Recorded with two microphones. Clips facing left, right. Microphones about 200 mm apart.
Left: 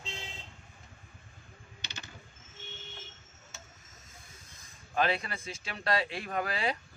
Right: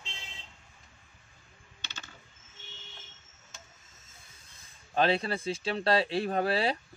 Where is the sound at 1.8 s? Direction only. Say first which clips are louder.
Even; 15° left (ahead or behind).